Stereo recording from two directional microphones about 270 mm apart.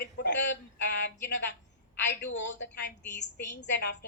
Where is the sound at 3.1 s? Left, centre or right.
Left.